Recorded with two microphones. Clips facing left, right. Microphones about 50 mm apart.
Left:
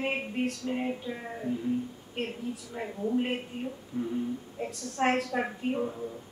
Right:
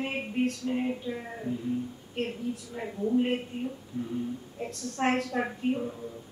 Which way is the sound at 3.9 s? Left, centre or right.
Left.